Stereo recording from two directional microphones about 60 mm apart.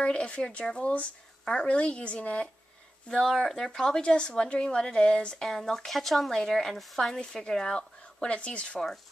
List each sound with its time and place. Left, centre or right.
0.0 s speech: centre
3.1 s speech: centre